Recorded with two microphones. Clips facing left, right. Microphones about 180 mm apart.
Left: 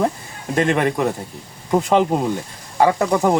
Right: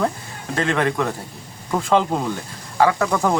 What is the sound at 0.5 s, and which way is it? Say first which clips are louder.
Speech: left 3 dB; 20° left (ahead or behind).